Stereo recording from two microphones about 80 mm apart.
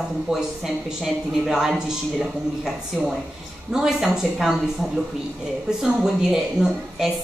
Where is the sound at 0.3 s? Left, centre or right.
Centre.